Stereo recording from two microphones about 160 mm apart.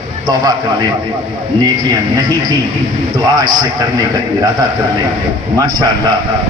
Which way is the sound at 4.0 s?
25° right (ahead or behind).